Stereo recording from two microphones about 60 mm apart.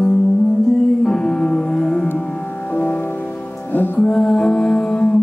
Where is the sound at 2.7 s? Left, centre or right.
Left.